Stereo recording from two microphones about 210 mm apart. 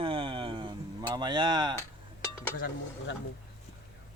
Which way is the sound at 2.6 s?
45° left (ahead or behind).